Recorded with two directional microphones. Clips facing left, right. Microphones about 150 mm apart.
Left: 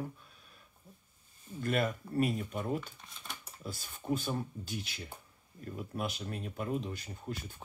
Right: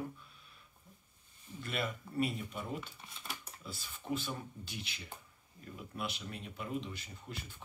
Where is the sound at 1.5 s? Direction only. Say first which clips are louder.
Left 7 dB; 45° left (ahead or behind).